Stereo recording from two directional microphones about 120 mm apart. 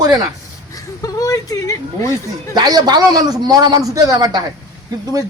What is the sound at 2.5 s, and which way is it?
A man's voice, 35° right (ahead or behind).